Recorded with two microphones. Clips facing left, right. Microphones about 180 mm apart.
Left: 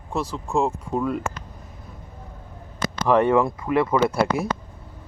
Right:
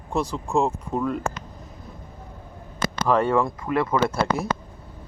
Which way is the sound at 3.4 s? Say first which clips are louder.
Left 3 dB; 5° left (ahead or behind).